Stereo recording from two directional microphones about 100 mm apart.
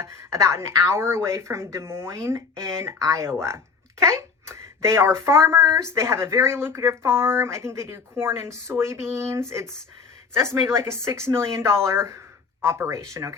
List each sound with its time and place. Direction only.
0.0 s speech: 30° right (ahead or behind)